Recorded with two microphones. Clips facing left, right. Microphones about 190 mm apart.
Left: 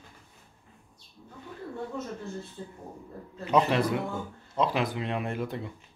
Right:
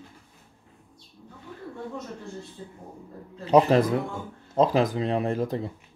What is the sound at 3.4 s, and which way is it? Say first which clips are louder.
Speech: right 6 dB; 40° right (ahead or behind).